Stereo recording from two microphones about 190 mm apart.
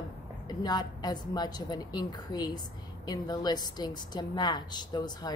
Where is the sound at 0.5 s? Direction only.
20° left (ahead or behind).